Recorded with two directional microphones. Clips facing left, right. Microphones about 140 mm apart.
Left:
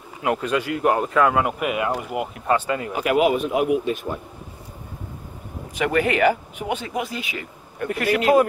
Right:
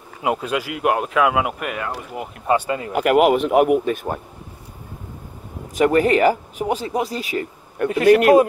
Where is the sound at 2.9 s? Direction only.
65° right (ahead or behind).